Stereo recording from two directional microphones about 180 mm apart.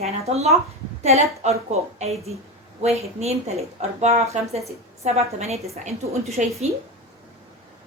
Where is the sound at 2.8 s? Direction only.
35° right (ahead or behind).